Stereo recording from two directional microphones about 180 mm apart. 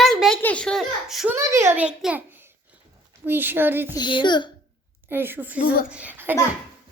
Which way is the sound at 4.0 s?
25° left (ahead or behind).